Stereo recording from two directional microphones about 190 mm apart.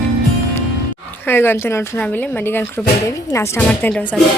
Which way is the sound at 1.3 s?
10° left (ahead or behind).